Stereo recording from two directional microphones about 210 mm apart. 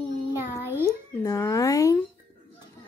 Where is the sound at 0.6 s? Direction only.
10° right (ahead or behind).